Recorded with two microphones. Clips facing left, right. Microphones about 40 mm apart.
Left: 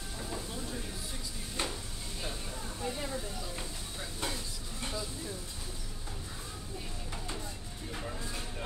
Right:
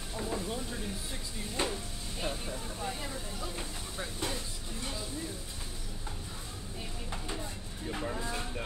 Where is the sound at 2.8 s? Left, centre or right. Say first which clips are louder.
Left 3 dB; centre.